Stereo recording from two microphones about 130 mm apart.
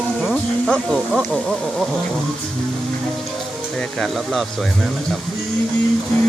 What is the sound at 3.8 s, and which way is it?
Speech, centre (ahead or behind).